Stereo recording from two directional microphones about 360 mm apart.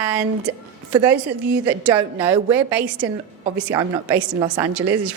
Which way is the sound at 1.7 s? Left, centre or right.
Centre.